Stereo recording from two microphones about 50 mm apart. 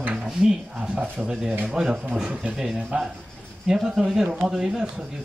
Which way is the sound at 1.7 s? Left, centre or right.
Centre.